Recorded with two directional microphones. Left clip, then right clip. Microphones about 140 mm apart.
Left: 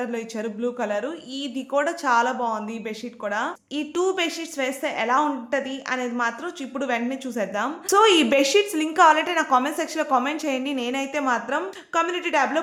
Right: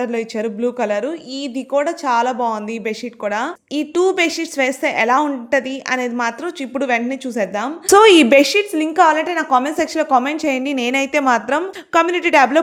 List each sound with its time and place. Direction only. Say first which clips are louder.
0.0 s a woman's voice: right 8 dB; 45° right (ahead or behind)
1.7 s a woman's voice: right 4 dB; 30° right (ahead or behind)
2.4 s a woman's voice: right 6 dB; 55° right (ahead or behind)
3.8 s a woman's voice: right 8 dB; 35° right (ahead or behind)
8.7 s a woman's voice: right 3 dB; 30° right (ahead or behind); by 12.5 s 55° right (ahead or behind)